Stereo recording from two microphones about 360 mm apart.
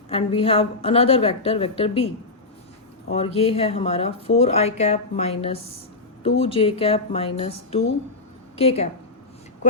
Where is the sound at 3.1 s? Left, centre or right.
Centre.